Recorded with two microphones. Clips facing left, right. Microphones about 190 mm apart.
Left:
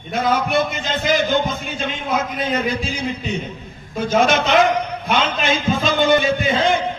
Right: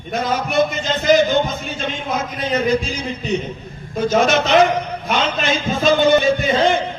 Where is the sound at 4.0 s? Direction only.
45° right (ahead or behind).